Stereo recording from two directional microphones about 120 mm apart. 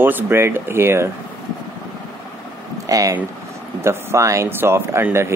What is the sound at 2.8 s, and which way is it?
Speech, 30° right (ahead or behind).